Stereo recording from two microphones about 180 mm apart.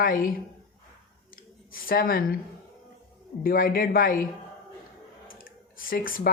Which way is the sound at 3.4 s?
55° left (ahead or behind).